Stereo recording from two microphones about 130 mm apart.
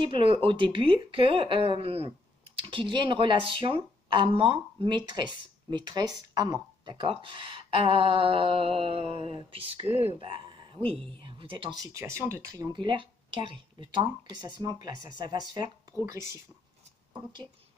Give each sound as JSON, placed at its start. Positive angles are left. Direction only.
{"t": 0.0, "sound": "a woman's voice", "side_deg": -45}
{"t": 10.2, "sound": "a woman's voice", "side_deg": -40}
{"t": 16.0, "sound": "speech", "side_deg": -20}
{"t": 17.1, "sound": "a woman's voice", "side_deg": -35}